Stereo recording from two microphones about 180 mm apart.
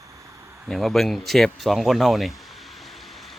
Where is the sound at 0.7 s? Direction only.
Centre (ahead or behind).